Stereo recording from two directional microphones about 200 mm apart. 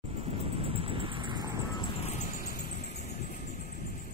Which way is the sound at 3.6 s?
50° left (ahead or behind).